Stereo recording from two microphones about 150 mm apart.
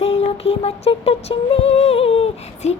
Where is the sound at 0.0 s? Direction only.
45° left (ahead or behind).